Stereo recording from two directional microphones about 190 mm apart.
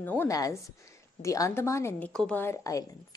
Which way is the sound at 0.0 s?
10° left (ahead or behind).